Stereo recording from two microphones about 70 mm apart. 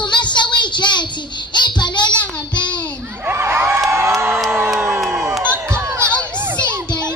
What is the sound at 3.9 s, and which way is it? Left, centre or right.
Crowd, right.